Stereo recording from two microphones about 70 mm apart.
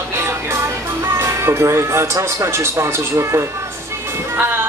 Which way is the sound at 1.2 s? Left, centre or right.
Right.